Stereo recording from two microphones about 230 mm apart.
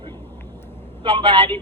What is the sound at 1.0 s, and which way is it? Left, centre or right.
Speech, right.